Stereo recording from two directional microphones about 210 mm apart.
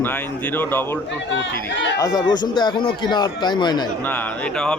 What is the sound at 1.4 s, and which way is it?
Speech, 60° left (ahead or behind).